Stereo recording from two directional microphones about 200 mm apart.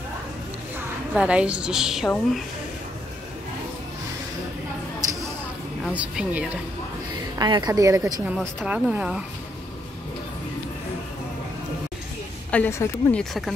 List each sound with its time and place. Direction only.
0.7 s a woman's voice: 5° right (ahead or behind)
5.9 s speech: 5° right (ahead or behind)
7.3 s a woman's voice: 20° right (ahead or behind)
8.0 s a woman's voice: centre (ahead or behind)
12.4 s a woman's voice: 10° left (ahead or behind)